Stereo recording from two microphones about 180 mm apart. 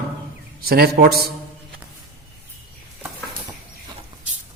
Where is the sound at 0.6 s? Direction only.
60° right (ahead or behind).